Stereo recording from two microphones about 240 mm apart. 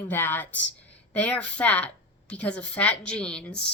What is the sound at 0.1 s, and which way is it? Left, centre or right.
A woman's voice, centre.